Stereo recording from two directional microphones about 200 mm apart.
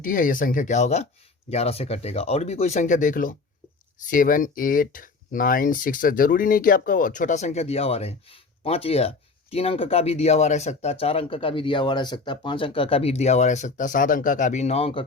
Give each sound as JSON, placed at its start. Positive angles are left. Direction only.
{"t": 0.0, "sound": "speech", "side_deg": 40}